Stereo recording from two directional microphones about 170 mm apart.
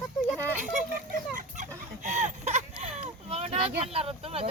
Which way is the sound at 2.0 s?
45° right (ahead or behind).